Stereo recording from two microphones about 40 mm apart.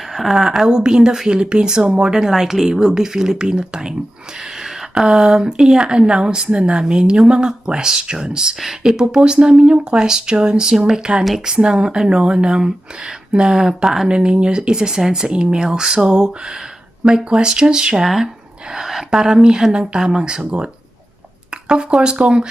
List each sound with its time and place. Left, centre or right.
0.1 s speech: centre
8.6 s speech: centre
9.0 s speech: right
18.0 s speech: centre; by 20.7 s right
21.7 s speech: right